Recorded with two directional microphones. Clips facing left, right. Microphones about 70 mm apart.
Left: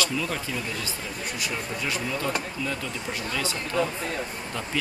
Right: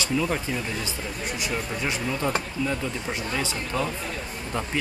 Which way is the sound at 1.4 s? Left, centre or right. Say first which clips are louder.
Right 2 dB; right.